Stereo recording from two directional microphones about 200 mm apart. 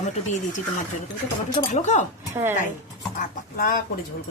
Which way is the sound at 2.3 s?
10° right (ahead or behind).